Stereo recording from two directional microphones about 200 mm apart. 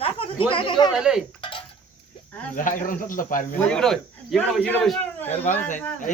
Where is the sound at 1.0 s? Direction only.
Centre (ahead or behind).